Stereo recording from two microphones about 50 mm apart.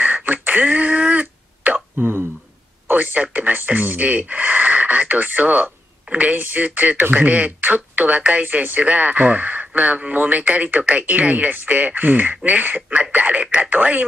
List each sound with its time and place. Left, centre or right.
0.0 s throat clearing: right
2.0 s a sound: right
2.9 s speech: right